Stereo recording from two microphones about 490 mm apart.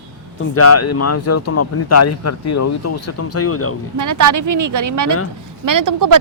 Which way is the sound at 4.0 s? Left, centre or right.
Right.